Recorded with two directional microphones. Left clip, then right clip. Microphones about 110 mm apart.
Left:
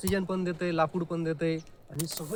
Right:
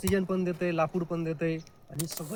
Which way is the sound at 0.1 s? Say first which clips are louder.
Right 2 dB; 30° left (ahead or behind).